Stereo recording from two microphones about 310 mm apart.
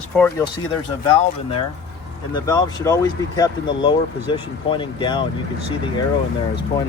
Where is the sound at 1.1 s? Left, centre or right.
Centre.